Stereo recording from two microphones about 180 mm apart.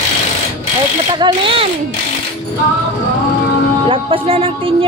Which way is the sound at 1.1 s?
25° right (ahead or behind).